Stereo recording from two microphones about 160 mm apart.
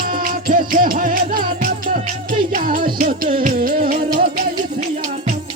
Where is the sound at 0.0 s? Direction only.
60° right (ahead or behind).